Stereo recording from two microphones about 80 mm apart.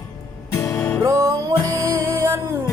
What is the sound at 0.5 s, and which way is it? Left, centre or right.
Music, left.